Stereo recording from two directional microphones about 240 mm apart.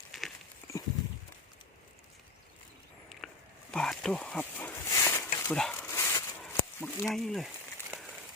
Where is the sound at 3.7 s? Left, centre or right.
Centre.